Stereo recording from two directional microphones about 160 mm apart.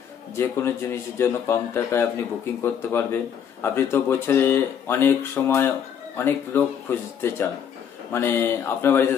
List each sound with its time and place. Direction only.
0.4 s speech: 15° left (ahead or behind)